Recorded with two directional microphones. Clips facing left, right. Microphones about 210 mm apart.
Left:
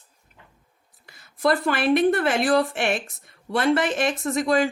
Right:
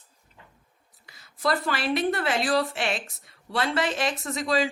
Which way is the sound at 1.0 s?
55° left (ahead or behind).